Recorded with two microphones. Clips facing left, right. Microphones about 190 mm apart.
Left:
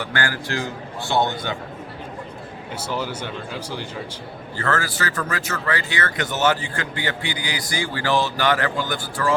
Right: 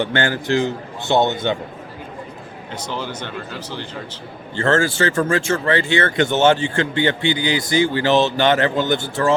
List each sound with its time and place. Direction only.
0.0 s speech: 25° right (ahead or behind)
2.7 s speech: 10° left (ahead or behind)
4.5 s speech: 25° right (ahead or behind)